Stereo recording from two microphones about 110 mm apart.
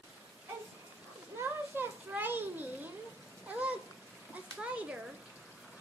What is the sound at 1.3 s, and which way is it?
Children playing, 20° right (ahead or behind).